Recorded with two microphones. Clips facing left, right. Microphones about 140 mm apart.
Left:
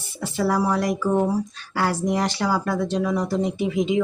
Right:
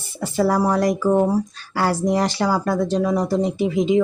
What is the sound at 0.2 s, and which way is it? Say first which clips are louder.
Speech: right 3 dB; 40° right (ahead or behind).